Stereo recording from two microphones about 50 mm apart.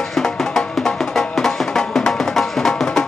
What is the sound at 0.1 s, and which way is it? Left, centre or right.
Music, centre.